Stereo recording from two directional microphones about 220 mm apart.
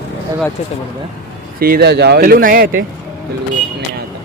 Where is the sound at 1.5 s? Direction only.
45° right (ahead or behind).